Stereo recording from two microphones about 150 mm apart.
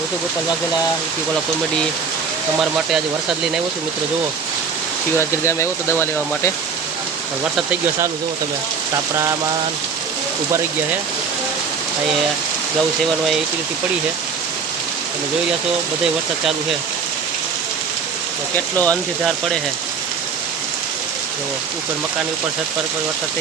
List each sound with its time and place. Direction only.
2.6 s speech: 5° right (ahead or behind)
5.1 s speech: 15° left (ahead or behind)
18.5 s speech: 10° left (ahead or behind)